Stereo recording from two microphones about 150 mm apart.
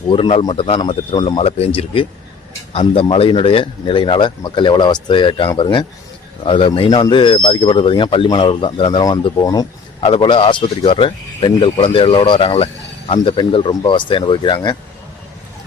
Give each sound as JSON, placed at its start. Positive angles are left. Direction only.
{"t": 0.1, "sound": "speech", "side_deg": 40}
{"t": 10.0, "sound": "speech", "side_deg": 35}